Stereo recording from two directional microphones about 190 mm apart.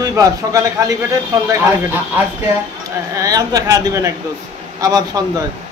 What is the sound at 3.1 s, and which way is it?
A man's voice, 20° right (ahead or behind).